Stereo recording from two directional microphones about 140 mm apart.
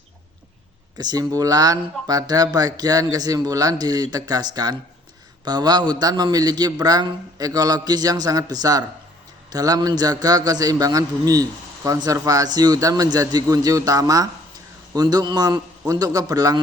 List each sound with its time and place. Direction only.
0.9 s a man's voice: 30° right (ahead or behind)